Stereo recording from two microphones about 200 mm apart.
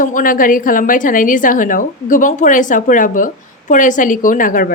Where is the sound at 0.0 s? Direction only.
40° left (ahead or behind).